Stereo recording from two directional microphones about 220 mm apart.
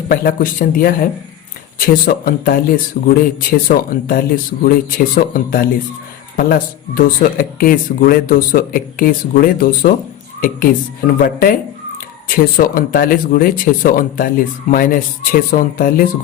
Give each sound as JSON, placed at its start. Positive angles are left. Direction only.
{"t": 0.1, "sound": "speech", "side_deg": 40}